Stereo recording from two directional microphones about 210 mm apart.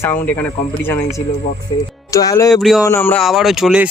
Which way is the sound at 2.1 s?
15° left (ahead or behind).